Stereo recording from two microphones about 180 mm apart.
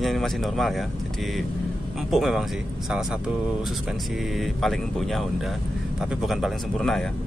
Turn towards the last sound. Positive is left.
turn(degrees=0)  # may be behind; listen again after turning